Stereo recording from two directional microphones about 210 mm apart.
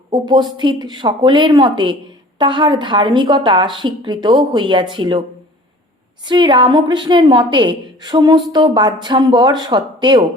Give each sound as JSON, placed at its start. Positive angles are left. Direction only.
{"t": 0.1, "sound": "a woman's voice", "side_deg": -20}
{"t": 6.2, "sound": "a woman's voice", "side_deg": -20}